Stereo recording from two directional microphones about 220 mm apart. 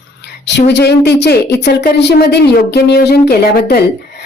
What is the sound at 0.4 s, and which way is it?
A woman's voice, 50° left (ahead or behind).